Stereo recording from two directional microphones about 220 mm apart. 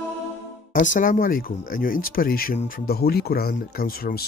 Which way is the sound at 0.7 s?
35° left (ahead or behind).